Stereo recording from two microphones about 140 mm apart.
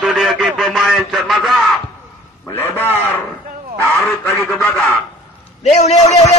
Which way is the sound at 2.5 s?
15° left (ahead or behind).